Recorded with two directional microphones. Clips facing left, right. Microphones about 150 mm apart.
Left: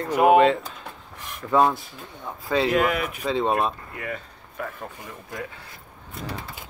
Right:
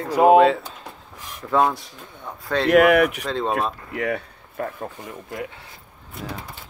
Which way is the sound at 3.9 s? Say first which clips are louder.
Right 8 dB; 90° right.